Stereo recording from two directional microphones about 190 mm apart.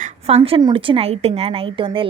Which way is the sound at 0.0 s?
35° right (ahead or behind).